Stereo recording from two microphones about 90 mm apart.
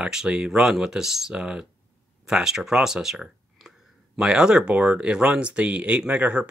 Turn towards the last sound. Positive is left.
turn(degrees=-15)  # may be behind; listen again after turning